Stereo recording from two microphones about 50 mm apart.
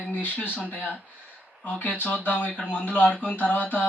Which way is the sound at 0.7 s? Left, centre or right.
Right.